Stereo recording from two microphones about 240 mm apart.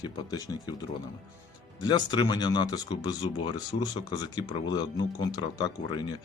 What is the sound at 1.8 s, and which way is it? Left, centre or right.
Speech, centre.